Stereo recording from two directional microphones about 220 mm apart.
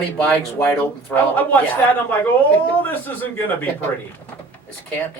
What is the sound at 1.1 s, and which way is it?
Speech, 10° left (ahead or behind).